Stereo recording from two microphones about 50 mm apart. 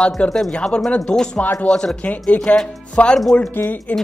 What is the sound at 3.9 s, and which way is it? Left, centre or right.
Speech, left.